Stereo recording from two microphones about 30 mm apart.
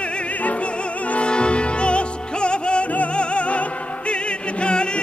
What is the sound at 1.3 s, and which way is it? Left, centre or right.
Music, left.